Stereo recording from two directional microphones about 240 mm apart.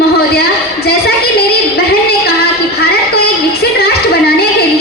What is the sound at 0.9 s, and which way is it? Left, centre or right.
Speech, left.